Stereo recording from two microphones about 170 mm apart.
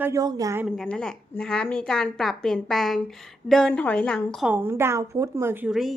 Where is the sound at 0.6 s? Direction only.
5° left (ahead or behind).